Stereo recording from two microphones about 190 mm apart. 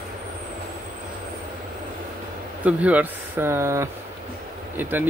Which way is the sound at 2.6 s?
5° right (ahead or behind).